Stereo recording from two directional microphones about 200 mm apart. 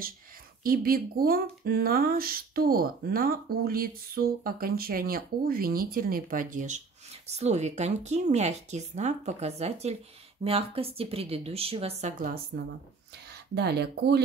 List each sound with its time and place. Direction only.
0.7 s speech: 45° right (ahead or behind)
12.5 s speech: 55° right (ahead or behind)